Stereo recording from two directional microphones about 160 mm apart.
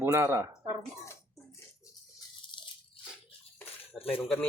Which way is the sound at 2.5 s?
30° left (ahead or behind).